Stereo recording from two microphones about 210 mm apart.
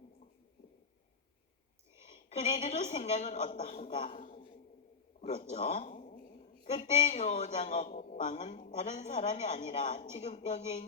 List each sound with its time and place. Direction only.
2.3 s speech: 35° left (ahead or behind)
5.2 s a sound: 30° left (ahead or behind)
6.7 s speech: 35° left (ahead or behind)